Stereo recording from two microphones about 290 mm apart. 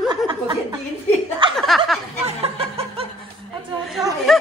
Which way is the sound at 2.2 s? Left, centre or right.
Centre.